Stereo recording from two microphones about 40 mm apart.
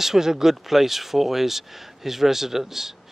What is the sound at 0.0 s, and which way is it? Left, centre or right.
Speech, centre.